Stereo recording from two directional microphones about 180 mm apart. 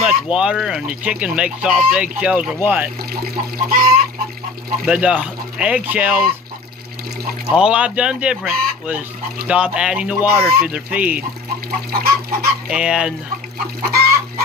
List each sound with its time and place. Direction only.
0.0 s speech: 5° right (ahead or behind)
3.1 s speech: 55° right (ahead or behind)
4.8 s speech: 5° right (ahead or behind)
7.5 s speech: 5° right (ahead or behind)
11.9 s speech: 55° right (ahead or behind)
12.6 s speech: 5° right (ahead or behind)
13.8 s speech: 55° right (ahead or behind)